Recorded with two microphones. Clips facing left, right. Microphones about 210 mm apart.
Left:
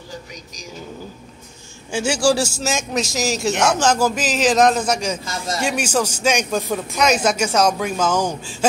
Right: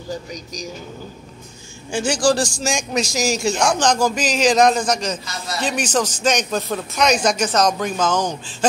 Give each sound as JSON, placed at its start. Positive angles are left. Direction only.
{"t": 0.3, "sound": "speech", "side_deg": -40}
{"t": 1.9, "sound": "a man's voice", "side_deg": 5}
{"t": 5.2, "sound": "speech", "side_deg": 50}
{"t": 5.6, "sound": "speech", "side_deg": 10}